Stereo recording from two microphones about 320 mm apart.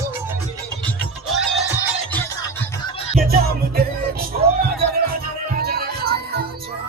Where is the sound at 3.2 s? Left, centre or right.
Right.